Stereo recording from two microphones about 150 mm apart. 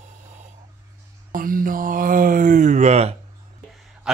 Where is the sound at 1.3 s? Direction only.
70° right (ahead or behind); by 3.2 s 45° right (ahead or behind).